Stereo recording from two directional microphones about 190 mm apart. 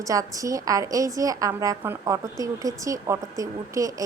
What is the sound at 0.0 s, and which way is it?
A woman's voice, 20° right (ahead or behind).